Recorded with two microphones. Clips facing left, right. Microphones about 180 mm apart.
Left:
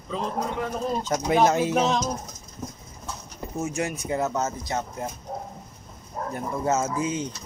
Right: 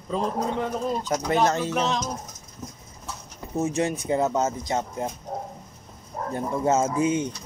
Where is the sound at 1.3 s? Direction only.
10° left (ahead or behind).